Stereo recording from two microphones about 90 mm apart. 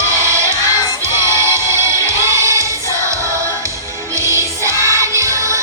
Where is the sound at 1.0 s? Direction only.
30° right (ahead or behind).